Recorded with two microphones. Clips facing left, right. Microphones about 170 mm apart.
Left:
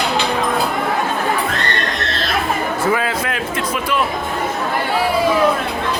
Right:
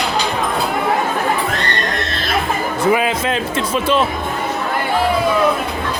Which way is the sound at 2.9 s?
20° right (ahead or behind).